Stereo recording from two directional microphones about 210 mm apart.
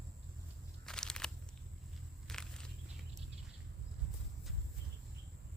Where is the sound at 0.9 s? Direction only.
5° left (ahead or behind).